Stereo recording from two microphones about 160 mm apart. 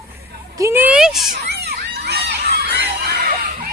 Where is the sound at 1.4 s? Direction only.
90° right.